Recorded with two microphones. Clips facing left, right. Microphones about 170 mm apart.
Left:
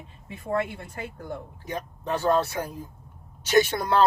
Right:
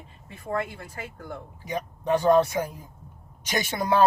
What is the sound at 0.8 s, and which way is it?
Speech, 25° left (ahead or behind).